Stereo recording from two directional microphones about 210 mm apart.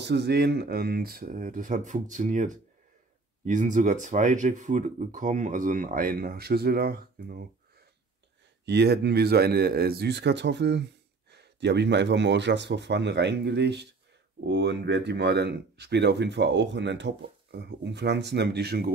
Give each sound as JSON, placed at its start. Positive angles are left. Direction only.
{"t": 0.0, "sound": "speech", "side_deg": -55}
{"t": 8.6, "sound": "speech", "side_deg": -50}